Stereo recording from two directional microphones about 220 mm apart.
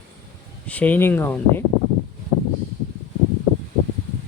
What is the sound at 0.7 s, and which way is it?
Speech, 5° left (ahead or behind).